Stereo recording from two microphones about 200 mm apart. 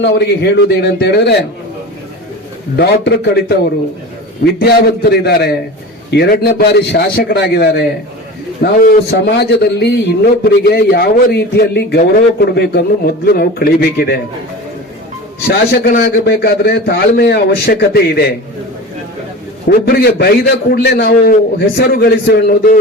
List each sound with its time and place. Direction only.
0.0 s a man's voice: 60° left (ahead or behind)
2.7 s a man's voice: 55° left (ahead or behind)
4.6 s a man's voice: 55° left (ahead or behind)
15.4 s a man's voice: 50° left (ahead or behind)
19.6 s a man's voice: 50° left (ahead or behind)